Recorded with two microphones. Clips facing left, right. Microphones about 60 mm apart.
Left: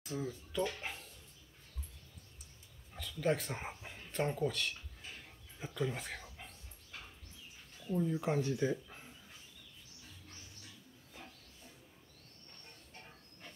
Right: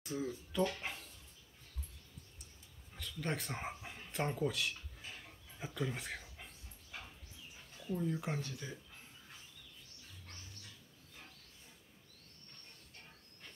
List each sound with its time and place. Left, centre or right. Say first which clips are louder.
0.0 s speech: even; centre
2.9 s a sound: left 6 dB; centre
7.9 s speech: left 4 dB; centre
8.4 s speech: left 11 dB; left